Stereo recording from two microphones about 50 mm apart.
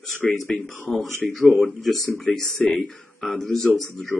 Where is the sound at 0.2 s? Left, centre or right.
Centre.